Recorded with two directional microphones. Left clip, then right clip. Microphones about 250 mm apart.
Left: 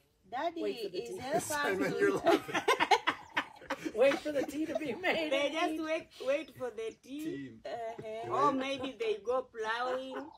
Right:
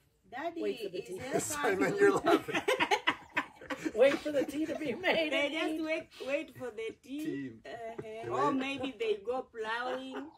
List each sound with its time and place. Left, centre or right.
0.3 s speech: centre
1.3 s a woman's voice: centre
2.5 s laughter: centre
3.8 s a sound: centre
4.2 s a woman's voice: centre